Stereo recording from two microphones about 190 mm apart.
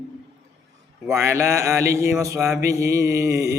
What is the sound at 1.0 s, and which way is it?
Mantra, 15° right (ahead or behind).